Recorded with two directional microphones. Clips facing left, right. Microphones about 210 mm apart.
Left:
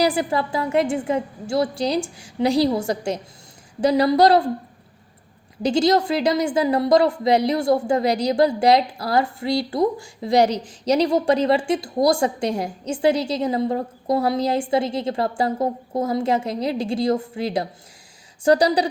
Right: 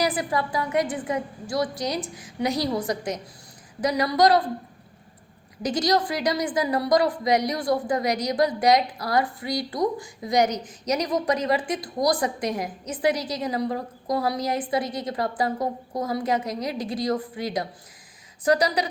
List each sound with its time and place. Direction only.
0.0 s a woman's voice: 30° left (ahead or behind)
5.6 s a woman's voice: 25° left (ahead or behind)